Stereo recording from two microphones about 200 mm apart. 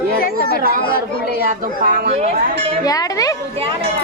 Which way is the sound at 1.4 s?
45° right (ahead or behind).